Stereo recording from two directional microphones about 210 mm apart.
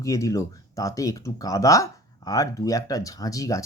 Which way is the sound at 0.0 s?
15° left (ahead or behind).